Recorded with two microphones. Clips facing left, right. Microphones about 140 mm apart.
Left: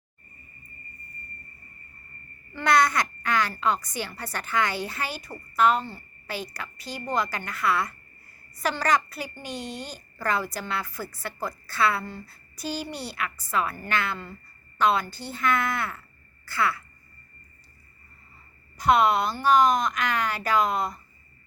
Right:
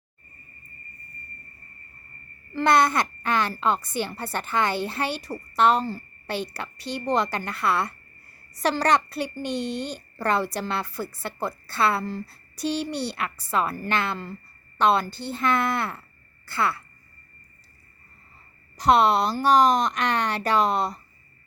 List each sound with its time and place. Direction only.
2.5 s a woman's voice: 30° right (ahead or behind)
6.8 s a woman's voice: 75° right (ahead or behind)
7.2 s a woman's voice: 30° right (ahead or behind)
9.4 s speech: 10° left (ahead or behind)
9.6 s a woman's voice: 70° right (ahead or behind)
10.2 s a woman's voice: 30° right (ahead or behind)
12.9 s a woman's voice: 75° right (ahead or behind)
13.5 s a woman's voice: 30° right (ahead or behind)
18.9 s a woman's voice: 35° right (ahead or behind)